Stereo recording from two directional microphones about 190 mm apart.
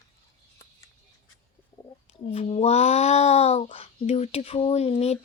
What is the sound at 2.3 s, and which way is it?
Speech, 35° left (ahead or behind).